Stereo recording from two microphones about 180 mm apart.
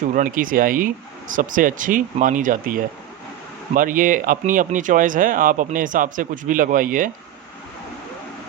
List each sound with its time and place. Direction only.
0.2 s speech: 50° right (ahead or behind)